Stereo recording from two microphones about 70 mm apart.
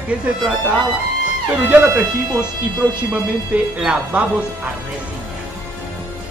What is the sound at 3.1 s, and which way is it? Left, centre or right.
A woman's voice, centre.